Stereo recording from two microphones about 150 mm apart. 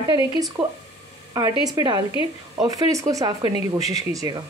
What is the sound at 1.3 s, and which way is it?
Speech, 25° right (ahead or behind).